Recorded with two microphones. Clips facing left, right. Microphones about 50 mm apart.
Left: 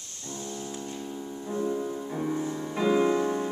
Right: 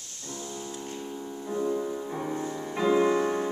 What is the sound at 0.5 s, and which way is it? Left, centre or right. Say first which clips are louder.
Music: even; centre.